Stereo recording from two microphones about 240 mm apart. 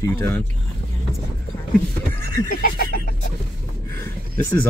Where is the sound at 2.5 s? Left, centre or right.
Left.